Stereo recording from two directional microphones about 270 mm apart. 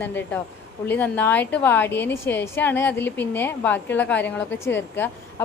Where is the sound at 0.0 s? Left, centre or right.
Centre.